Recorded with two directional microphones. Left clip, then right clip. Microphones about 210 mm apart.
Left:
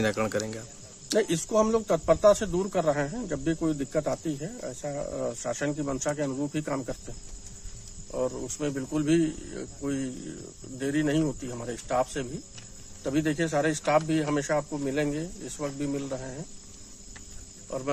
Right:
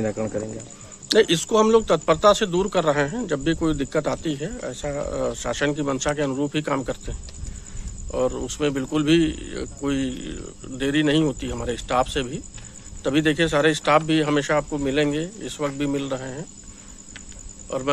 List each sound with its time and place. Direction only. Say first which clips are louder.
0.0 s speech: right 1 dB; 20° left (ahead or behind)
1.0 s a man's voice: right 8 dB; centre (ahead or behind)
8.1 s a man's voice: right 7 dB; centre (ahead or behind)